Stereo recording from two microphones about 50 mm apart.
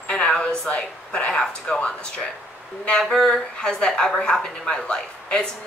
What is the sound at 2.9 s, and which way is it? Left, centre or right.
Speech, centre.